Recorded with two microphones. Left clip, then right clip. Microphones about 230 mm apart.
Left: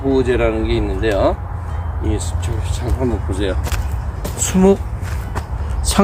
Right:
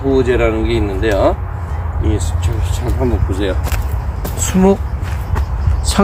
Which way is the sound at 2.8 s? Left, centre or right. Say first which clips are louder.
Right 2 dB; centre.